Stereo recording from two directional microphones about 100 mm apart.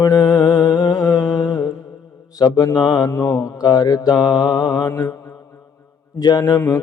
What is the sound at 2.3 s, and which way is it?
Mantra, 40° left (ahead or behind).